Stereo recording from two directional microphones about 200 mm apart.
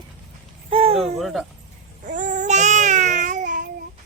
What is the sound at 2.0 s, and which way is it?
Babbling, 40° right (ahead or behind).